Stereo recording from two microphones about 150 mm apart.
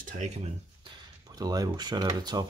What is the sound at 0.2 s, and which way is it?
Speech, 50° right (ahead or behind).